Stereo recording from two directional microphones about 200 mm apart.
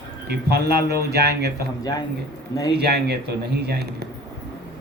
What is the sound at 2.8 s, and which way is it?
Speech, 55° right (ahead or behind).